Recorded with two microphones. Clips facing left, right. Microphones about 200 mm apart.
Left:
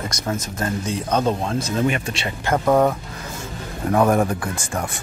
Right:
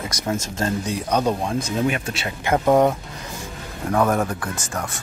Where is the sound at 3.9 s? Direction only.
10° left (ahead or behind).